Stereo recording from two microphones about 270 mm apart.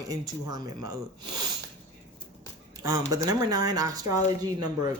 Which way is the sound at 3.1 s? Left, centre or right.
Centre.